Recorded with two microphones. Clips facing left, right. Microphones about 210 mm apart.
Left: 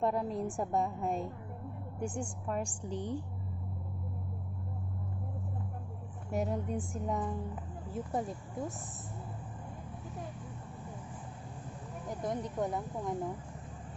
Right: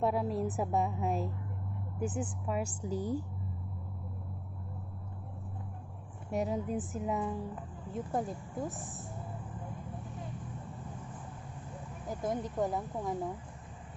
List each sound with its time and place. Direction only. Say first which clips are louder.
0.0 s a woman's voice: right 1 dB; 5° right (ahead or behind)
6.3 s a woman's voice: right 1 dB; centre (ahead or behind)
12.2 s a woman's voice: right 2 dB; centre (ahead or behind)